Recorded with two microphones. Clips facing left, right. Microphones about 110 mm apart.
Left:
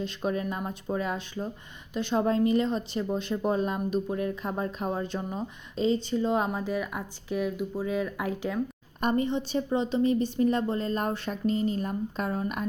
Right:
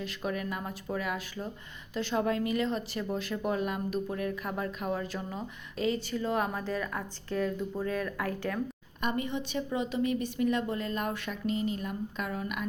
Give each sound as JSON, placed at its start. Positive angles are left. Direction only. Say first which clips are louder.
{"t": 0.0, "sound": "speech", "louder": "left 4 dB", "side_deg": 25}
{"t": 9.0, "sound": "a woman's voice", "louder": "left 6 dB", "side_deg": 35}